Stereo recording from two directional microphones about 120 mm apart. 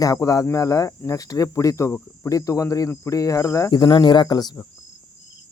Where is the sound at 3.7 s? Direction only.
35° left (ahead or behind).